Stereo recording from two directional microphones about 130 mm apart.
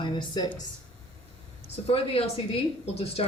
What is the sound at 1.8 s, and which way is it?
A woman's voice, 50° left (ahead or behind).